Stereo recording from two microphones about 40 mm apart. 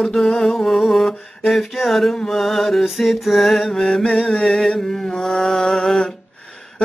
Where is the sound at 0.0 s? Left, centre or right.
Centre.